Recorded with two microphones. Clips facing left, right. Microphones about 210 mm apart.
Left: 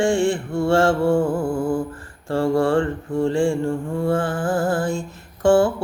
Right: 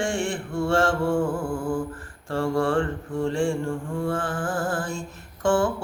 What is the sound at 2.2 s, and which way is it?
Mantra, 30° left (ahead or behind).